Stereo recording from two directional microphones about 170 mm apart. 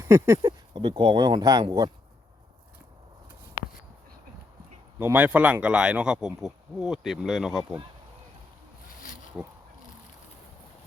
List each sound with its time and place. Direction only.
0.0 s speech: 15° right (ahead or behind)
0.7 s speech: 30° right (ahead or behind)
4.9 s speech: 10° right (ahead or behind)
9.4 s speech: 5° right (ahead or behind)